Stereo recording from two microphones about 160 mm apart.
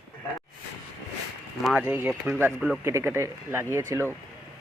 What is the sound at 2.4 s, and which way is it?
Speech, centre (ahead or behind).